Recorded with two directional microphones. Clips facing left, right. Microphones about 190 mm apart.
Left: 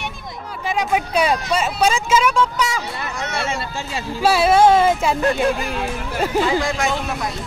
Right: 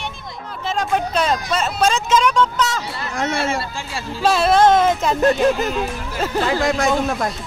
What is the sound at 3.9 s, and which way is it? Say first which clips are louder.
Speech: left 1 dB; 10° left (ahead or behind).